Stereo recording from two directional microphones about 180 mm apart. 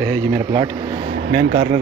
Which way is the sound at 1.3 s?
70° right (ahead or behind).